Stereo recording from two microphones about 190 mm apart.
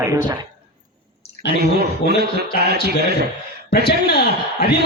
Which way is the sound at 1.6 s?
55° right (ahead or behind).